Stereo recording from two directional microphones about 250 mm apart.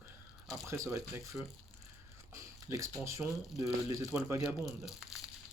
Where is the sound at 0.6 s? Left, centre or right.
Centre.